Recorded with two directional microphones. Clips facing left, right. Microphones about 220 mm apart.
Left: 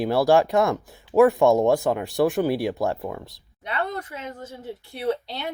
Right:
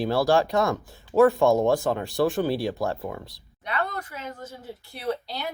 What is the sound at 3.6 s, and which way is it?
Speech, 30° left (ahead or behind).